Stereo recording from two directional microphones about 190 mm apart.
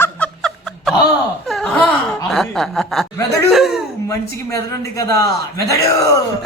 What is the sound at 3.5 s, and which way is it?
Speech, centre (ahead or behind).